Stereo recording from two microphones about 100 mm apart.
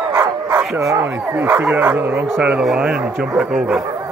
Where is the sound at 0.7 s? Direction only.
30° right (ahead or behind).